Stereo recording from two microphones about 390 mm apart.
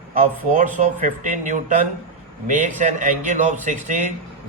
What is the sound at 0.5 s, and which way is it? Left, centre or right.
A man's voice, centre.